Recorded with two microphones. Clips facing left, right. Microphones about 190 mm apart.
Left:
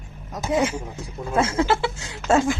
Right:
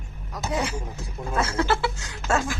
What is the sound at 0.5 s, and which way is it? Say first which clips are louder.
A woman's voice: left 6 dB; 20° left (ahead or behind).